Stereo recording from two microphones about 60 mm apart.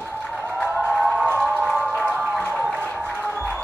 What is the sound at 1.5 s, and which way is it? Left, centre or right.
Music, right.